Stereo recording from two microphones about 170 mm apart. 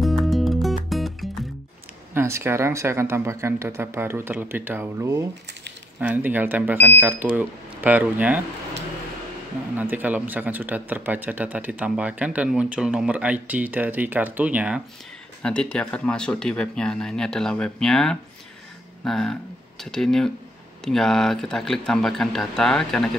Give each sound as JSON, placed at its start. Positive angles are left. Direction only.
{"t": 0.0, "sound": "music", "side_deg": 0}
{"t": 2.1, "sound": "speech", "side_deg": -15}
{"t": 9.8, "sound": "speech", "side_deg": -10}
{"t": 15.4, "sound": "speech", "side_deg": 5}